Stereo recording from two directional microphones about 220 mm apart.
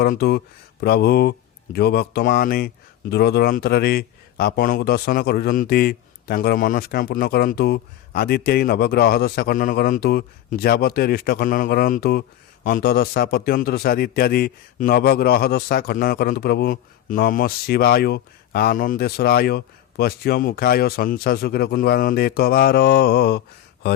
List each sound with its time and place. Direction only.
0.0 s speech: 45° left (ahead or behind)